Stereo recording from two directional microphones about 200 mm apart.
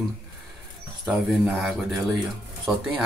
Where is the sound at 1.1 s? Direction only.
Centre (ahead or behind).